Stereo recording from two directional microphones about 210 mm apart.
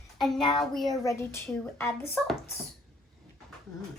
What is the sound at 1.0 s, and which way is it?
Speech, 10° left (ahead or behind).